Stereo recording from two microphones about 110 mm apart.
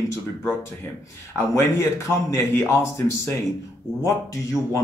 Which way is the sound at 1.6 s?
25° left (ahead or behind).